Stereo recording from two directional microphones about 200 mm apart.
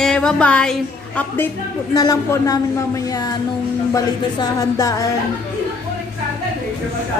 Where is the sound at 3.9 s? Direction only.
15° left (ahead or behind).